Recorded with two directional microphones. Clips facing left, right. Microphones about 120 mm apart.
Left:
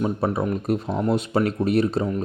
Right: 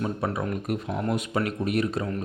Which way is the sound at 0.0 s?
30° left (ahead or behind).